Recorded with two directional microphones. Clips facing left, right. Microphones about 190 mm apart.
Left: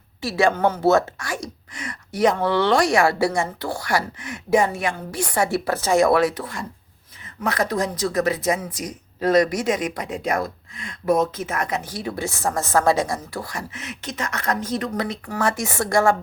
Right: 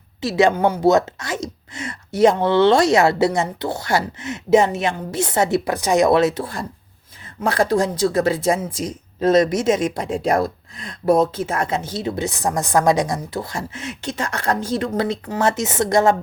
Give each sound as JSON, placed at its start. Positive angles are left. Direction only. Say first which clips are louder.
{"t": 0.2, "sound": "a woman's voice", "louder": "right 3 dB", "side_deg": -20}